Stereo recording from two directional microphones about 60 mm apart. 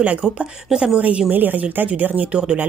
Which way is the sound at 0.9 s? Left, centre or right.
Right.